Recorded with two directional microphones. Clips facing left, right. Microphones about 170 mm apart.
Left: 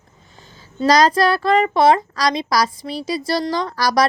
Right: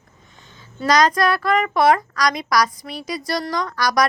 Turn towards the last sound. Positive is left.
turn(degrees=30)  # may be behind; listen again after turning